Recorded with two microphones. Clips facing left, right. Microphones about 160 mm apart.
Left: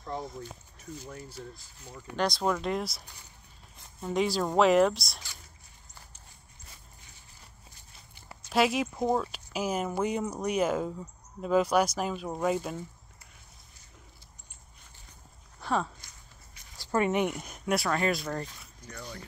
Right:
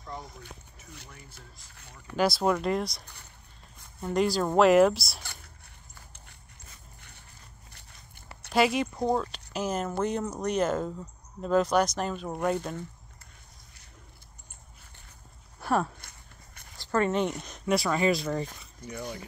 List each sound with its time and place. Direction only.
2.1 s speech: 5° right (ahead or behind)
4.0 s speech: centre (ahead or behind)
5.2 s speech: 60° right (ahead or behind)
7.0 s a sound: 60° right (ahead or behind)
8.5 s speech: centre (ahead or behind)
15.6 s speech: 5° right (ahead or behind)
16.7 s speech: 10° left (ahead or behind)
18.9 s speech: 20° right (ahead or behind)